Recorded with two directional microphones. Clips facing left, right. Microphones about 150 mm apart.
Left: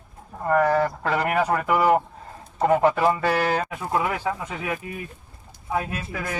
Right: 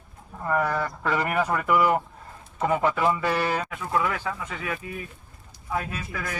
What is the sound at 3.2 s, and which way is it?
Speech, 65° left (ahead or behind).